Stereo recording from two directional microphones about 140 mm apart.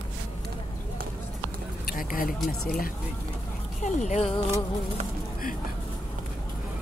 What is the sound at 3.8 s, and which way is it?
Speech, 60° left (ahead or behind).